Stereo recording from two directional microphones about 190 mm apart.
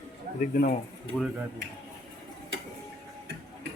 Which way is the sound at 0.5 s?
50° left (ahead or behind).